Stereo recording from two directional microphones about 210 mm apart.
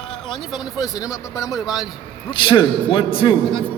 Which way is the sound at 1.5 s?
Centre (ahead or behind).